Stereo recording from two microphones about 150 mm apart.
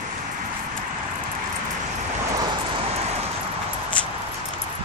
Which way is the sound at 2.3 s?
35° right (ahead or behind).